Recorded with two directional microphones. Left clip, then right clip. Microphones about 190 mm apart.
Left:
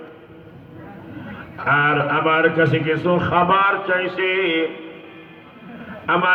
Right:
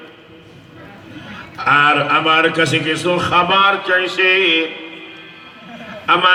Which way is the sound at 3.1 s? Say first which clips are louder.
Right 4 dB; 5° left (ahead or behind).